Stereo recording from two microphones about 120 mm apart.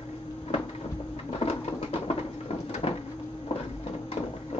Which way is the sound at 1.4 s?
55° left (ahead or behind).